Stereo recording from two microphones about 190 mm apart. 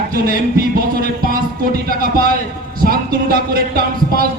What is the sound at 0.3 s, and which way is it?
A man's voice, 50° right (ahead or behind).